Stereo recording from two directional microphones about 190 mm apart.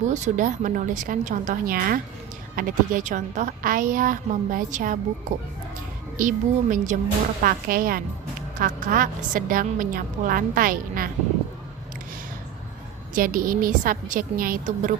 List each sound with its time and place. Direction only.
0.1 s a woman's voice: 45° right (ahead or behind)
6.1 s a woman's voice: 45° right (ahead or behind)
13.1 s a woman's voice: 45° right (ahead or behind)